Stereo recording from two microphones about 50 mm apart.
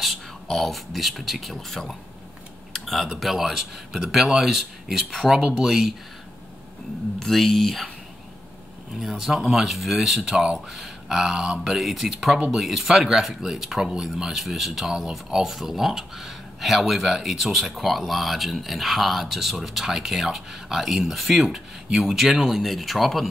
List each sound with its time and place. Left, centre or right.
0.5 s speech: centre
2.7 s typing: centre
3.2 s speech: centre
7.2 s speech: centre
9.0 s speech: centre